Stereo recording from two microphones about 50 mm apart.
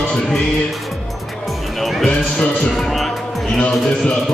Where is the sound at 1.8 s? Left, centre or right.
Centre.